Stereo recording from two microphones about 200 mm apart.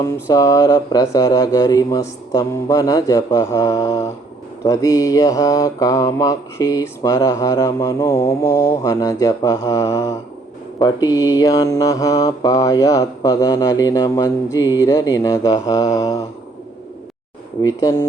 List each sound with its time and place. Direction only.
0.0 s mantra: 15° left (ahead or behind)
17.7 s mantra: 15° left (ahead or behind)